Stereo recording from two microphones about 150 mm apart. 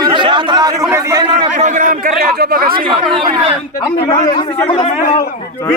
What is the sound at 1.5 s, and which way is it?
A man's voice, 55° right (ahead or behind).